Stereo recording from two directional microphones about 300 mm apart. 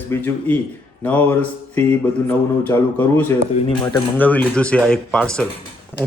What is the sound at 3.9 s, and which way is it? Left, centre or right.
A man's voice, centre.